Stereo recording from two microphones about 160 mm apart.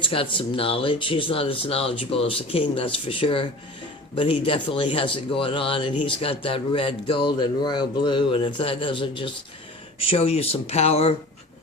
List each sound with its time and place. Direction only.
0.0 s a man's voice: 35° left (ahead or behind)